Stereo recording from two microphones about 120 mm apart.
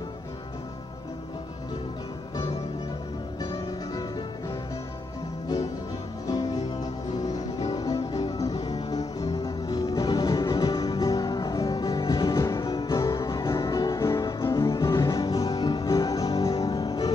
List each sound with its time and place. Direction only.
6.2 s music: 30° left (ahead or behind)
7.7 s music: 30° left (ahead or behind)